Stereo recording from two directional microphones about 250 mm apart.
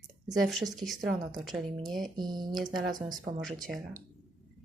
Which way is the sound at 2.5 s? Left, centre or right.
Centre.